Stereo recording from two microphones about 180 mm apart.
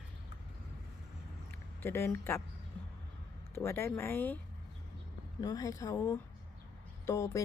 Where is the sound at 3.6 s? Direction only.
15° left (ahead or behind).